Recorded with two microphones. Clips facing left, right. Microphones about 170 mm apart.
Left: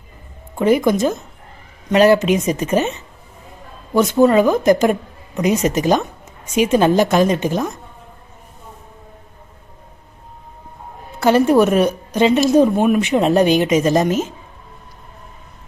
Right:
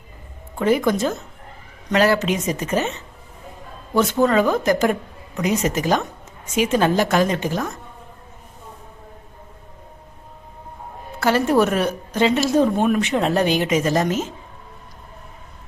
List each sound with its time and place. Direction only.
0.6 s a woman's voice: 15° left (ahead or behind)
11.2 s a woman's voice: 20° left (ahead or behind)